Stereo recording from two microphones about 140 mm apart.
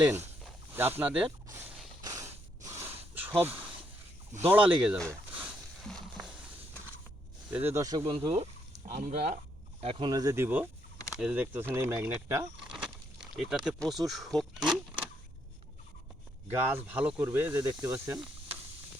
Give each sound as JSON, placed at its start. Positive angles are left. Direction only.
{"t": 0.0, "sound": "speech", "side_deg": -15}
{"t": 2.0, "sound": "a sound", "side_deg": -25}
{"t": 3.2, "sound": "a sound", "side_deg": -15}
{"t": 4.4, "sound": "speech", "side_deg": -10}
{"t": 5.3, "sound": "a sound", "side_deg": -5}
{"t": 7.5, "sound": "speech", "side_deg": -15}
{"t": 8.1, "sound": "speech", "side_deg": -45}
{"t": 8.9, "sound": "speech", "side_deg": -65}
{"t": 9.8, "sound": "speech", "side_deg": -45}
{"t": 10.1, "sound": "speech", "side_deg": -25}
{"t": 12.7, "sound": "a sound", "side_deg": -5}
{"t": 13.7, "sound": "speech", "side_deg": 0}
{"t": 16.5, "sound": "speech", "side_deg": -15}